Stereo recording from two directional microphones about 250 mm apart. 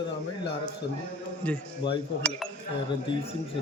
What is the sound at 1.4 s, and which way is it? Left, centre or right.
Speech, centre.